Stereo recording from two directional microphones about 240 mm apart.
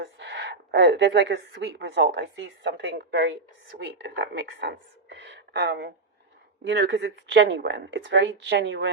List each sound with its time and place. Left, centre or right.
0.0 s speech: right